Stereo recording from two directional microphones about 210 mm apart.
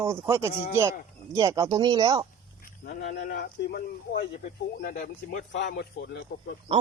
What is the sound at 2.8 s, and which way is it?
Speech, 45° left (ahead or behind).